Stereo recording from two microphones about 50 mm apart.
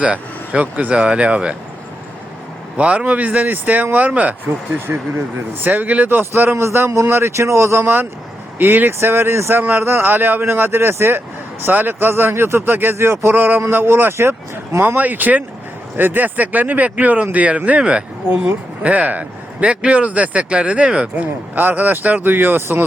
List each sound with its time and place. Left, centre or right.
0.0 s a sound: right
0.6 s speech: right
0.9 s a man's voice: right
2.7 s speech: right
4.9 s speech: right
6.1 s a man's voice: right
8.5 s speech: right
8.9 s a man's voice: right
9.6 s speech: right
11.6 s a man's voice: right
14.8 s a man's voice: right; by 21.1 s centre
21.2 s speech: right